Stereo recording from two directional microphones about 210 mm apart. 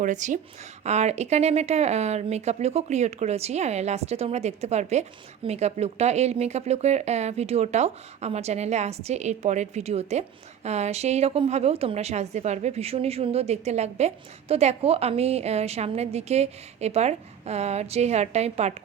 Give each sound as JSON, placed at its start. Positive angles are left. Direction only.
{"t": 0.0, "sound": "speech", "side_deg": -35}